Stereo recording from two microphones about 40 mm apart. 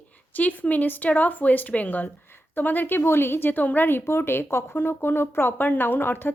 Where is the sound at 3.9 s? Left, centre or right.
Left.